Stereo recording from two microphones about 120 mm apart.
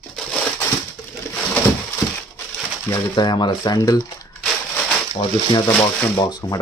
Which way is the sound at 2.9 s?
35° left (ahead or behind).